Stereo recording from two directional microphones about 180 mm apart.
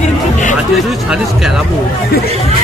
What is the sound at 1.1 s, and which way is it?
Speech, 5° right (ahead or behind).